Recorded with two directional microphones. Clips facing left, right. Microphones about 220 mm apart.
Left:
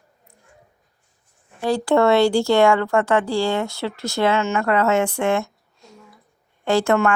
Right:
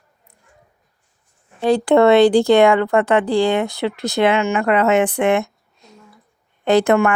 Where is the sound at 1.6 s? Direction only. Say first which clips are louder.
Right 4 dB; 20° right (ahead or behind).